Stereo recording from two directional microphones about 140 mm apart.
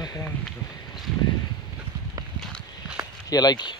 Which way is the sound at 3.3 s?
30° left (ahead or behind).